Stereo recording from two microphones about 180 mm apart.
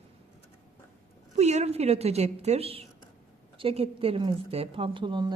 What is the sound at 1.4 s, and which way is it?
A woman's voice, 40° right (ahead or behind).